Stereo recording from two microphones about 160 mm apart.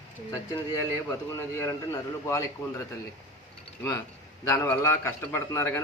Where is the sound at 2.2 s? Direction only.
15° left (ahead or behind).